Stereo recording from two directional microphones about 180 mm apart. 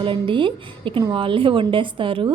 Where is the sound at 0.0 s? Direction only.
30° right (ahead or behind).